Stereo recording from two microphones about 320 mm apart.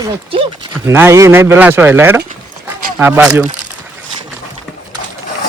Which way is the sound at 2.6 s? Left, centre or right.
Centre.